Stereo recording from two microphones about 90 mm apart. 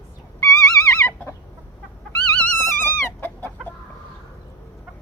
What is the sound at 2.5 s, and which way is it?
Chicken, 25° left (ahead or behind).